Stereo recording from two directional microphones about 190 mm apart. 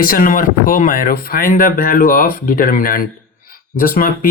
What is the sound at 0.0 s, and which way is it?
Speech, 50° left (ahead or behind).